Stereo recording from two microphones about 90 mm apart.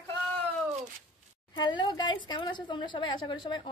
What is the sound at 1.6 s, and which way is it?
A woman's voice, 55° left (ahead or behind).